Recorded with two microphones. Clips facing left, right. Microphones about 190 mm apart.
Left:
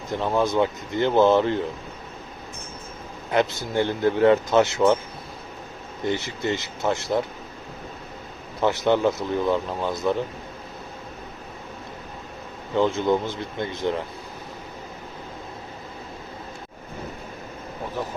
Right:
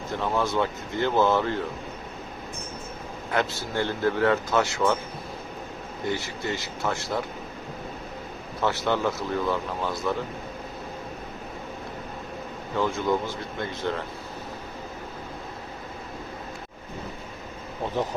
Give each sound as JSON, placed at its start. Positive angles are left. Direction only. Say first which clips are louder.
{"t": 0.1, "sound": "speech", "louder": "left 4 dB", "side_deg": 15}
{"t": 3.3, "sound": "speech", "louder": "left 5 dB", "side_deg": 15}
{"t": 6.1, "sound": "speech", "louder": "left 4 dB", "side_deg": 20}
{"t": 8.6, "sound": "speech", "louder": "left 5 dB", "side_deg": 20}
{"t": 12.7, "sound": "speech", "louder": "left 4 dB", "side_deg": 20}